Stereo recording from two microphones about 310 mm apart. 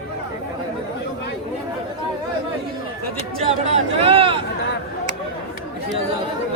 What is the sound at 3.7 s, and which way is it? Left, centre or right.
Speech, centre.